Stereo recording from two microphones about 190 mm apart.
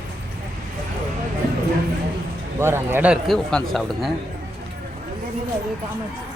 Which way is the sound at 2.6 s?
10° right (ahead or behind).